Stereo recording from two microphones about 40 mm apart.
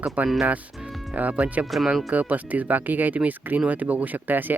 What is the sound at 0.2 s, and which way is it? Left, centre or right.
Speech, right.